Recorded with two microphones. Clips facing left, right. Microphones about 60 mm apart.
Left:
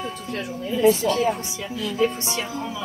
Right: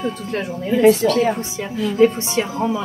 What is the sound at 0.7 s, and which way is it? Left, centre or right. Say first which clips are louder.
Speech: right 5 dB; right.